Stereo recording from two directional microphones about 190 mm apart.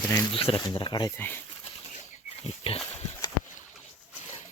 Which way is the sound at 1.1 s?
10° left (ahead or behind).